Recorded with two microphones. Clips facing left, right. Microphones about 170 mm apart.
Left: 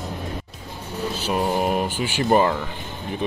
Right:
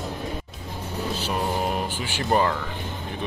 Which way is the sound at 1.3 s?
15° left (ahead or behind).